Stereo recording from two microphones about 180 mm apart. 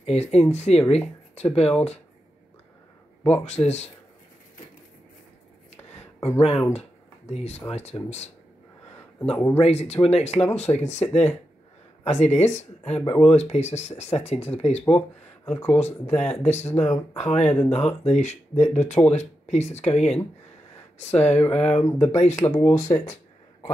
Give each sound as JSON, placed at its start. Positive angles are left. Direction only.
{"t": 0.0, "sound": "speech", "side_deg": 35}
{"t": 3.4, "sound": "speech", "side_deg": 35}
{"t": 6.1, "sound": "a sound", "side_deg": 15}
{"t": 6.7, "sound": "speech", "side_deg": 35}
{"t": 9.3, "sound": "speech", "side_deg": 10}
{"t": 9.6, "sound": "speech", "side_deg": 35}
{"t": 14.9, "sound": "speech", "side_deg": 5}
{"t": 16.2, "sound": "speech", "side_deg": 40}
{"t": 16.7, "sound": "speech", "side_deg": 5}
{"t": 17.1, "sound": "speech", "side_deg": 35}
{"t": 17.5, "sound": "speech", "side_deg": 5}
{"t": 18.2, "sound": "speech", "side_deg": 40}
{"t": 21.5, "sound": "speech", "side_deg": 5}